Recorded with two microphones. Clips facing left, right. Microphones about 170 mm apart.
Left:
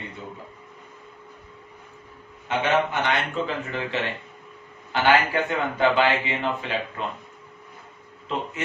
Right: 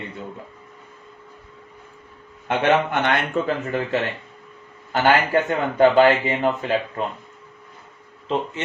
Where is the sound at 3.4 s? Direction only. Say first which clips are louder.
Right 5 dB; 45° right (ahead or behind).